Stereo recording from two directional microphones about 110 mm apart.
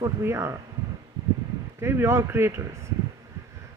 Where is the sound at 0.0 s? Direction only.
25° right (ahead or behind).